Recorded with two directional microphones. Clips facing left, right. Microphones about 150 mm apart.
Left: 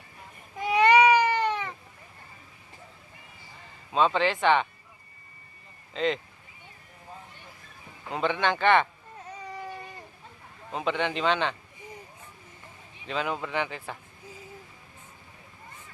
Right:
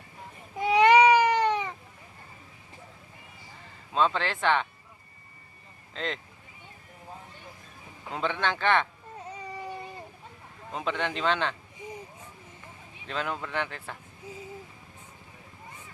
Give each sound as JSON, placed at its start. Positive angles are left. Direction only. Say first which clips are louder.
{"t": 0.6, "sound": "a sound", "louder": "right 1 dB", "side_deg": -20}
{"t": 3.9, "sound": "a man's voice", "louder": "left 3 dB", "side_deg": 0}
{"t": 5.9, "sound": "speech", "louder": "left 7 dB", "side_deg": 0}
{"t": 8.1, "sound": "a man's voice", "louder": "left 3 dB", "side_deg": 0}
{"t": 9.3, "sound": "baby cry", "louder": "even", "side_deg": -10}
{"t": 10.7, "sound": "a man's voice", "louder": "left 2 dB", "side_deg": 0}
{"t": 13.1, "sound": "a man's voice", "louder": "left 2 dB", "side_deg": 5}